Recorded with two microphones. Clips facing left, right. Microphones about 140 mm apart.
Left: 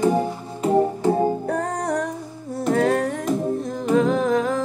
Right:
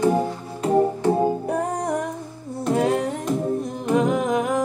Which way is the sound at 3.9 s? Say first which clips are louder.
Left 1 dB; 15° right (ahead or behind).